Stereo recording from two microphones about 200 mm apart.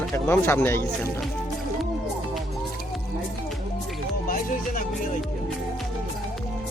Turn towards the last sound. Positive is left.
turn(degrees=45)  # may be behind; listen again after turning